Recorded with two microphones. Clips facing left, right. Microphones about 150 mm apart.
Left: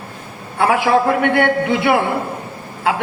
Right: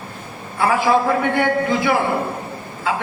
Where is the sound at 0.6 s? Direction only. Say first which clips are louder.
Left 2 dB; 70° left (ahead or behind).